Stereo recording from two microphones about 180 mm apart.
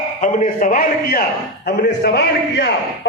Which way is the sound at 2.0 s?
65° left (ahead or behind).